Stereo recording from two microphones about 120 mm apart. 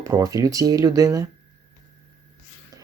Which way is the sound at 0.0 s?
30° right (ahead or behind).